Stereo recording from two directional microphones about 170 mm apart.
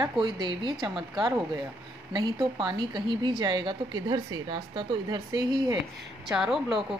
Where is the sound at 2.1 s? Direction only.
25° right (ahead or behind).